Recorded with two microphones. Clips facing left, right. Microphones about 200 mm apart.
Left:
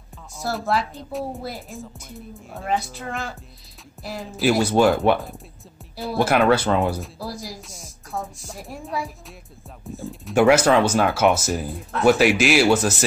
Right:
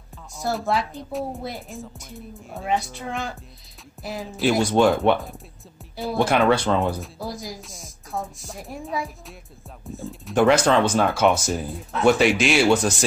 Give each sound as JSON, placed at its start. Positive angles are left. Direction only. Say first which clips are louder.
{"t": 0.4, "sound": "speech", "louder": "even", "side_deg": 0}